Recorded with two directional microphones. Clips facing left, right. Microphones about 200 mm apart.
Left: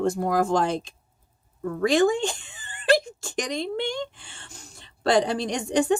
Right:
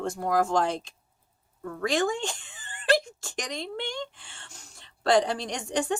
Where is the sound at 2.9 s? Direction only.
20° left (ahead or behind).